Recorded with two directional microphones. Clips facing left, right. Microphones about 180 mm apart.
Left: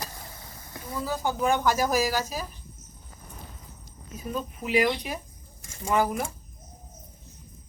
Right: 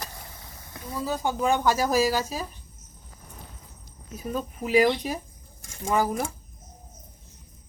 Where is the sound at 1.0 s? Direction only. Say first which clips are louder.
Right 1 dB; 20° right (ahead or behind).